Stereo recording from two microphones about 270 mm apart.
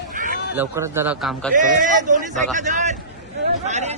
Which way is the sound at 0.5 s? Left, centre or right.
Centre.